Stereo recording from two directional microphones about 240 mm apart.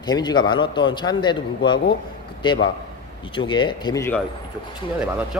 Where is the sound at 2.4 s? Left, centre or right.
Centre.